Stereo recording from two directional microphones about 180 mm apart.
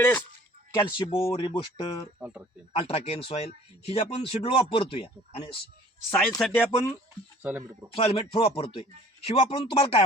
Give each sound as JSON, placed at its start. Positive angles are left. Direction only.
{"t": 0.0, "sound": "speech", "side_deg": 10}
{"t": 0.7, "sound": "speech", "side_deg": 25}
{"t": 2.1, "sound": "speech", "side_deg": -10}
{"t": 2.7, "sound": "speech", "side_deg": 35}
{"t": 6.1, "sound": "speech", "side_deg": 10}
{"t": 7.4, "sound": "speech", "side_deg": -10}
{"t": 7.9, "sound": "speech", "side_deg": 30}